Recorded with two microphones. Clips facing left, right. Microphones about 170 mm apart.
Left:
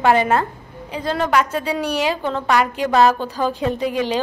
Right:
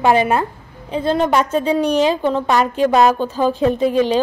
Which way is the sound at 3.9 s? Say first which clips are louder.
Right 5 dB; 15° left (ahead or behind).